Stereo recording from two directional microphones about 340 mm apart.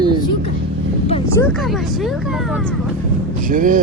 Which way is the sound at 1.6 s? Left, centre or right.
Centre.